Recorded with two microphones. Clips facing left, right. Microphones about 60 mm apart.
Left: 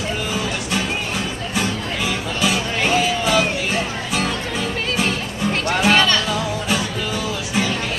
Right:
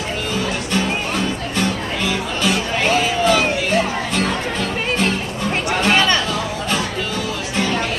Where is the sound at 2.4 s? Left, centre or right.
Centre.